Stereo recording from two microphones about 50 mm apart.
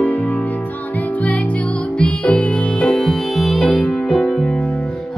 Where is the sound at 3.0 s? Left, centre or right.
Centre.